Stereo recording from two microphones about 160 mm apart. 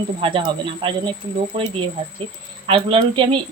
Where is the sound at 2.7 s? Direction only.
35° right (ahead or behind).